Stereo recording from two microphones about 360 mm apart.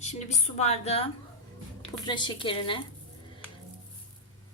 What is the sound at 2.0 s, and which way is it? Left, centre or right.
Speech, centre.